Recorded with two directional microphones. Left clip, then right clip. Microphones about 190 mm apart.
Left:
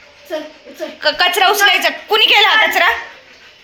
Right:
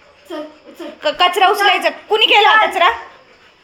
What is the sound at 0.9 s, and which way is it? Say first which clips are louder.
A woman's voice: even; 25° right (ahead or behind).